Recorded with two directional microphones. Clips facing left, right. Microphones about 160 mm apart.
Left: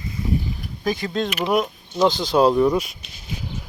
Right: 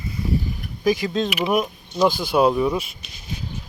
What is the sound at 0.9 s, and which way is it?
Speech, 20° right (ahead or behind).